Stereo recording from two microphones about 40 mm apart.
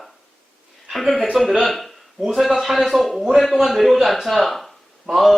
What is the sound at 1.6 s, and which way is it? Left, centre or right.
Speech, centre.